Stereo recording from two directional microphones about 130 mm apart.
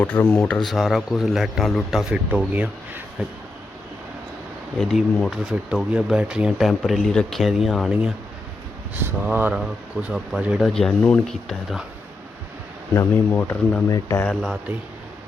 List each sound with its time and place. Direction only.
0.0 s speech: 15° left (ahead or behind); by 3.3 s 10° right (ahead or behind)
4.8 s speech: centre (ahead or behind)
9.0 s speech: 15° right (ahead or behind)
12.9 s speech: 15° left (ahead or behind)